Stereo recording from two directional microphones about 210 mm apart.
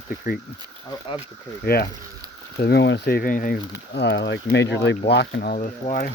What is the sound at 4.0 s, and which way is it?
Speech, 55° left (ahead or behind).